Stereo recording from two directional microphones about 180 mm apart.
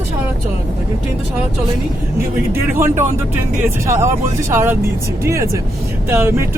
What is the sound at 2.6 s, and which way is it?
Speech, 10° right (ahead or behind).